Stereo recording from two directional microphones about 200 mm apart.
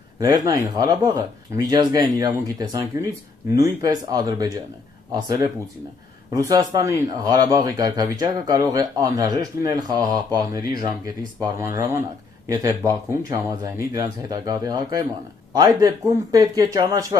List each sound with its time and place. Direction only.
0.2 s speech: 20° right (ahead or behind)